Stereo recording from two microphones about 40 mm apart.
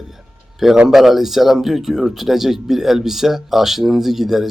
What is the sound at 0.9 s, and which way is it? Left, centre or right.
Speech, centre.